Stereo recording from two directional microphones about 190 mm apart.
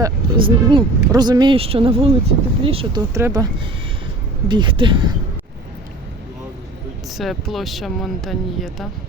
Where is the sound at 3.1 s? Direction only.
15° right (ahead or behind).